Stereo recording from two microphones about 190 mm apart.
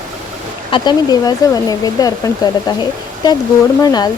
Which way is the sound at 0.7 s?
20° left (ahead or behind).